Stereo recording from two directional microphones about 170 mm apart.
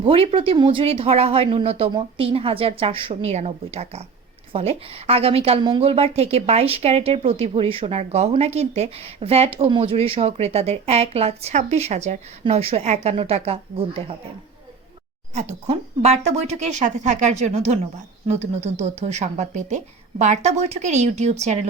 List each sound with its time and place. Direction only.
0.0 s a woman's voice: 35° right (ahead or behind)
15.4 s a woman's voice: 40° right (ahead or behind)